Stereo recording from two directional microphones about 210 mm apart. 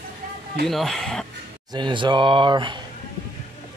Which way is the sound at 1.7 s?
20° right (ahead or behind).